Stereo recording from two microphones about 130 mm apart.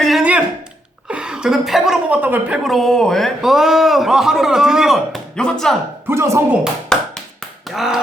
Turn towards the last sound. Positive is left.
turn(degrees=0)  # may be behind; listen again after turning